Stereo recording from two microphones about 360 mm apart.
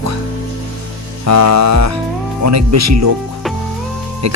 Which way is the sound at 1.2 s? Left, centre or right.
Right.